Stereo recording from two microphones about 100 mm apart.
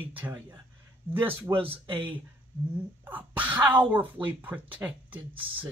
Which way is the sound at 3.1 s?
15° right (ahead or behind).